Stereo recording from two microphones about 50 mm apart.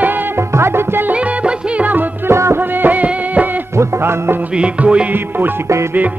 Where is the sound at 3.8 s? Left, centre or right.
Right.